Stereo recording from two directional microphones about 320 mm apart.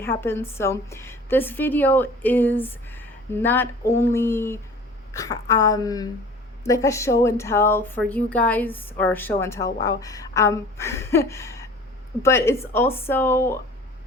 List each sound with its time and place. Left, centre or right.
0.0 s speech: centre